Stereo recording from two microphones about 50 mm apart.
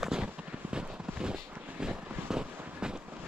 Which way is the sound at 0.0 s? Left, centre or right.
Centre.